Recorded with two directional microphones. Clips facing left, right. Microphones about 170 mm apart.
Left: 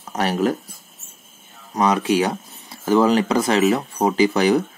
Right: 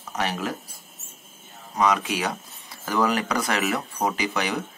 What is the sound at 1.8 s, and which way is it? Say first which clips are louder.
Speech: left 5 dB; 30° left (ahead or behind).